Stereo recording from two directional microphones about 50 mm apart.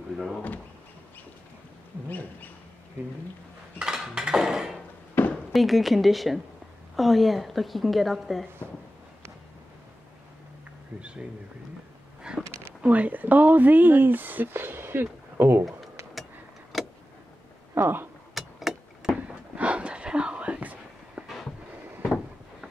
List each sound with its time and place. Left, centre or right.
2.0 s bird: left
3.8 s a sound: centre
5.3 s a woman's voice: centre
11.0 s a sound: right
12.2 s a sound: centre
12.8 s speech: right
16.7 s vehicle: centre
17.8 s speech: right
18.3 s vehicle: centre
19.2 s whispering: right